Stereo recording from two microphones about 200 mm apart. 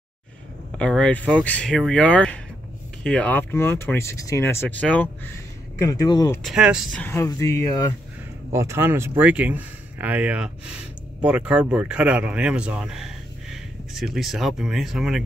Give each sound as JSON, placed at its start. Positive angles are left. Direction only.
{"t": 0.7, "sound": "speech", "side_deg": 5}
{"t": 6.4, "sound": "speech", "side_deg": -5}
{"t": 7.0, "sound": "speech", "side_deg": 10}
{"t": 8.5, "sound": "speech", "side_deg": -15}